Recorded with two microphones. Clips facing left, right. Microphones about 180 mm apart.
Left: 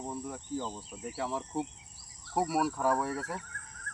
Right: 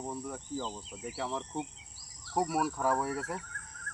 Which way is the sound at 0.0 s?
Centre (ahead or behind).